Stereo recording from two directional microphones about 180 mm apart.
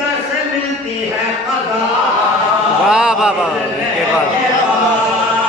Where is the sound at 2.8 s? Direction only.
5° right (ahead or behind).